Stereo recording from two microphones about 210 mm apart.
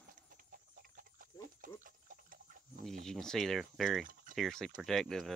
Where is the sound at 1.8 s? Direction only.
40° right (ahead or behind).